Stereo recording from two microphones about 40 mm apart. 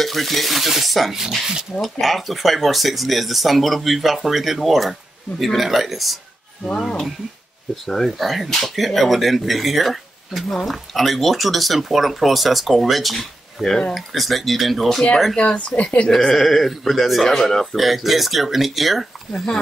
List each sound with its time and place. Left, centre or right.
0.0 s speech: centre
7.7 s speech: centre
15.3 s speech: left
16.2 s speech: centre
16.4 s speech: centre
17.7 s speech: centre
19.3 s speech: centre